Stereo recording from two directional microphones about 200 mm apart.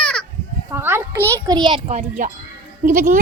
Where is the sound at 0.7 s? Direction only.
10° right (ahead or behind).